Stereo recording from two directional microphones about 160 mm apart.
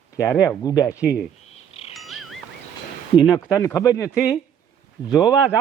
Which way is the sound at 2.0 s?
Centre (ahead or behind).